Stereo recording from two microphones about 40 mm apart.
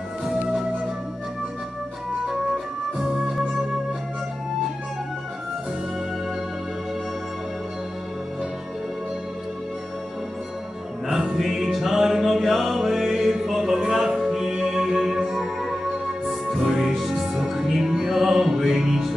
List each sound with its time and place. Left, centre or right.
2.2 s music: centre
11.1 s music: centre